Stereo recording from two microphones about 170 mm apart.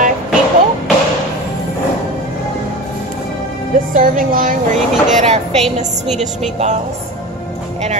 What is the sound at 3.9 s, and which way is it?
Speech, 50° right (ahead or behind).